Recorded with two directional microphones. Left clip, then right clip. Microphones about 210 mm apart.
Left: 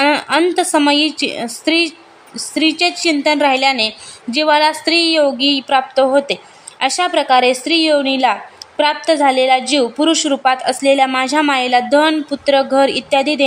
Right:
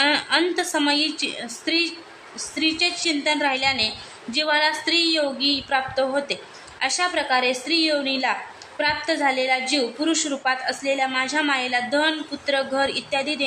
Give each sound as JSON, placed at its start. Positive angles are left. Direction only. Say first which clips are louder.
{"t": 0.0, "sound": "a woman's voice", "louder": "left 6 dB", "side_deg": 45}